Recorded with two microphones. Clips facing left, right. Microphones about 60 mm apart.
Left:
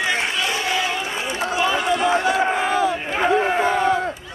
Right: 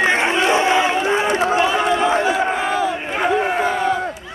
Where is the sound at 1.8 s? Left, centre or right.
Right.